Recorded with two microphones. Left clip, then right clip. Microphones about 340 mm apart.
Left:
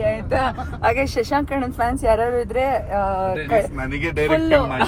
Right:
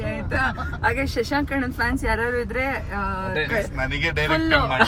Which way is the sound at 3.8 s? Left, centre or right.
Right.